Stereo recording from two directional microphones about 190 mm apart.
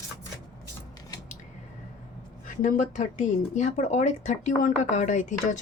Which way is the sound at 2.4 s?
45° left (ahead or behind).